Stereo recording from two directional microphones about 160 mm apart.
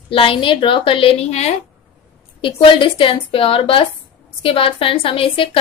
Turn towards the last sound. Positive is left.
turn(degrees=35)  # may be behind; listen again after turning